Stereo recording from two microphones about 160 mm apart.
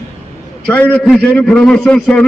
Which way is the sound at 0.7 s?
10° left (ahead or behind).